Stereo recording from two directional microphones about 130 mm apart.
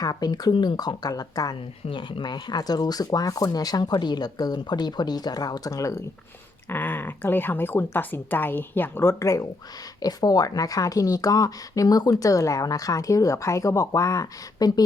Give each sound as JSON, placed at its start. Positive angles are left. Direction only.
{"t": 0.0, "sound": "speech", "side_deg": 30}